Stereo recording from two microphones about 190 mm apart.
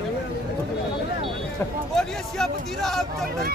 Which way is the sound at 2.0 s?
Centre (ahead or behind).